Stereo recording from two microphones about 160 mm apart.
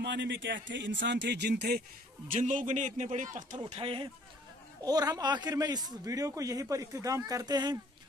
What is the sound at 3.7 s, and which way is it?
Speech, 35° right (ahead or behind).